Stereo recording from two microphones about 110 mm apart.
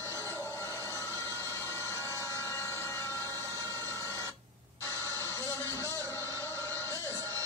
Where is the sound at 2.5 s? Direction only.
25° left (ahead or behind).